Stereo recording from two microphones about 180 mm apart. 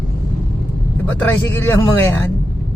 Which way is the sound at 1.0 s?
10° left (ahead or behind).